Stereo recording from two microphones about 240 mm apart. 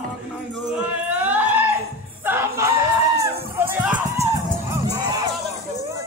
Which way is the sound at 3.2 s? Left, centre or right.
Centre.